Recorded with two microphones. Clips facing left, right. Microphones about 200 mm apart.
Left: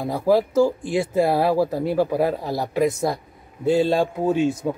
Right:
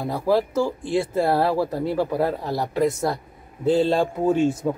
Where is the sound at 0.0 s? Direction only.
15° left (ahead or behind).